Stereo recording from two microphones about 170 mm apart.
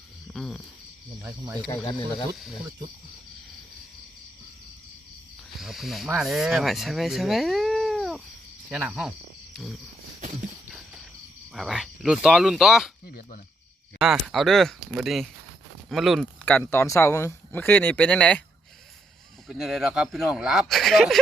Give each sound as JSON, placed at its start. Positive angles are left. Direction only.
{"t": 0.3, "sound": "a sound", "side_deg": 0}
{"t": 1.2, "sound": "speech", "side_deg": -15}
{"t": 5.5, "sound": "speech", "side_deg": 0}
{"t": 11.5, "sound": "speech", "side_deg": 0}
{"t": 13.1, "sound": "speech", "side_deg": 60}
{"t": 14.0, "sound": "speech", "side_deg": 0}
{"t": 16.5, "sound": "speech", "side_deg": 10}
{"t": 19.5, "sound": "speech", "side_deg": 0}